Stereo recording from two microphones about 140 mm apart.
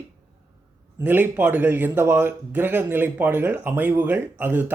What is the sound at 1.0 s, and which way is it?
Speech, 15° right (ahead or behind).